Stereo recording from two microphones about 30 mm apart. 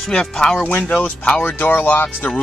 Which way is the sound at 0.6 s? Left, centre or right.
Left.